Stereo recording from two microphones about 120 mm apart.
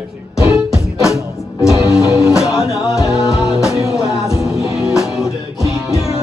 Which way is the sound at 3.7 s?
30° right (ahead or behind).